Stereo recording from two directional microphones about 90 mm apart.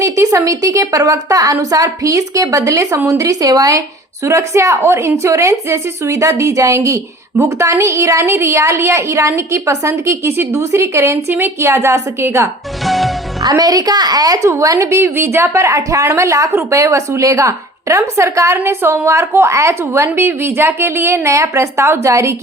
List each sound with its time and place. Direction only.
0.0 s a woman's voice: 35° right (ahead or behind)
12.8 s music: centre (ahead or behind)
13.4 s a woman's voice: 45° right (ahead or behind)